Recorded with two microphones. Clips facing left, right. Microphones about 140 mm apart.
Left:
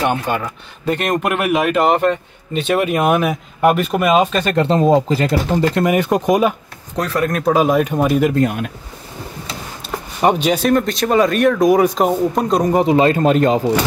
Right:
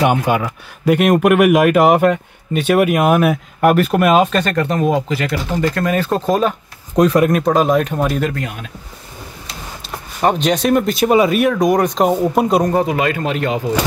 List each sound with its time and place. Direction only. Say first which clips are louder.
0.0 s speech: right 3 dB; 10° right (ahead or behind)
4.6 s speech: left 6 dB; 30° left (ahead or behind)
7.0 s speech: right 7 dB; 20° right (ahead or behind)
7.2 s speech: right 1 dB; centre (ahead or behind)
10.2 s speech: even; 5° left (ahead or behind)
10.7 s speech: right 4 dB; 5° right (ahead or behind)
12.1 s speech: right 2 dB; 5° right (ahead or behind)
12.7 s speech: left 3 dB; 25° left (ahead or behind)